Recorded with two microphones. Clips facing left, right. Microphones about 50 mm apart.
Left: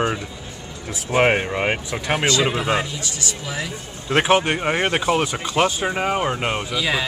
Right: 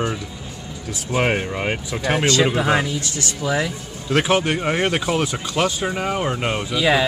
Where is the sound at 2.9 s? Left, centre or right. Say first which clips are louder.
Right 3 dB; right.